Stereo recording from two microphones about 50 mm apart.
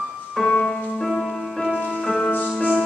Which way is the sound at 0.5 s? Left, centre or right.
Centre.